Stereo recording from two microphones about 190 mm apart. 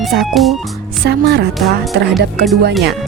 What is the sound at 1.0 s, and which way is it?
Speech, 60° right (ahead or behind).